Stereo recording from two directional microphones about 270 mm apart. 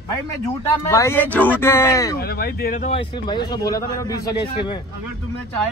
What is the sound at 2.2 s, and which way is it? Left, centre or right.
Speech, left.